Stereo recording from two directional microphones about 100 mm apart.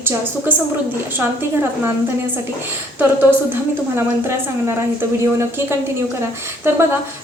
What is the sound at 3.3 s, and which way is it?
A woman's voice, 25° right (ahead or behind).